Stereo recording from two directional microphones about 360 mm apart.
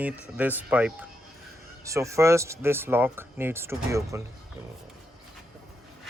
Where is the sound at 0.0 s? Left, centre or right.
Centre.